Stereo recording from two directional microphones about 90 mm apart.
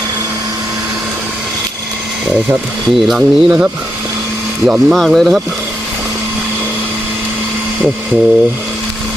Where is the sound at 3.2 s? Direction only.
15° right (ahead or behind).